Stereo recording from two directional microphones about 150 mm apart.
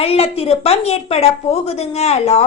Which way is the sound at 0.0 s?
40° left (ahead or behind).